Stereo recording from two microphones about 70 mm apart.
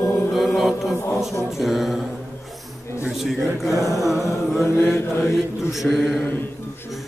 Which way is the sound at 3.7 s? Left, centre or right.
Left.